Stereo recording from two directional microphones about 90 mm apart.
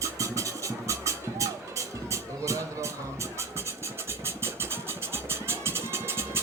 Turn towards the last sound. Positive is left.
turn(degrees=-30)  # may be behind; listen again after turning